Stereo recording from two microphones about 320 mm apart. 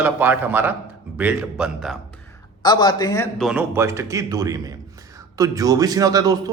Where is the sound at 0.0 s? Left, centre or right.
Centre.